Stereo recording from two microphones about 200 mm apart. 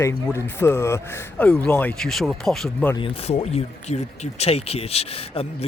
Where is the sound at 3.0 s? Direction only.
30° left (ahead or behind).